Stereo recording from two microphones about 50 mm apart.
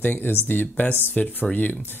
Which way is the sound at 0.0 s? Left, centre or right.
Left.